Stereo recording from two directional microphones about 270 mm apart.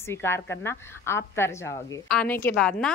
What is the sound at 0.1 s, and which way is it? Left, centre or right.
A woman's voice, centre.